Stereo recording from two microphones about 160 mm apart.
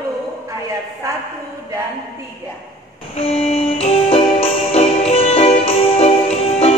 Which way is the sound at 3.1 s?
40° left (ahead or behind).